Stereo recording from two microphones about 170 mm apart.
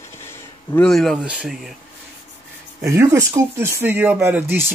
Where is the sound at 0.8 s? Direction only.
Centre (ahead or behind).